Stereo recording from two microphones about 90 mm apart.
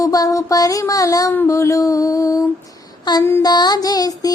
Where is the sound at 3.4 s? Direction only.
50° left (ahead or behind).